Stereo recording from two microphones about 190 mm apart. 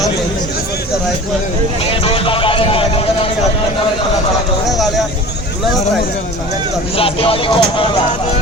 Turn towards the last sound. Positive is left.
turn(degrees=25)  # may be behind; listen again after turning